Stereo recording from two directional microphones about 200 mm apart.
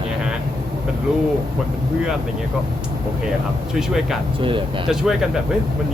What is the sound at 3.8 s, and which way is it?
Speech, centre (ahead or behind).